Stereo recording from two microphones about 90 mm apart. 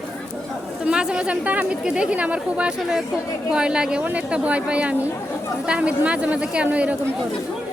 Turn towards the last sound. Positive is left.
turn(degrees=-15)  # may be behind; listen again after turning